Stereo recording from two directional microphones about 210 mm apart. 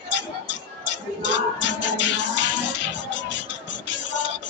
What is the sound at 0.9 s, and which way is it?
Music, 60° left (ahead or behind).